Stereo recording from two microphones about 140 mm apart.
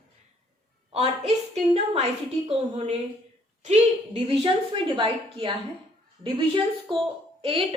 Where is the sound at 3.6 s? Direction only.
50° right (ahead or behind).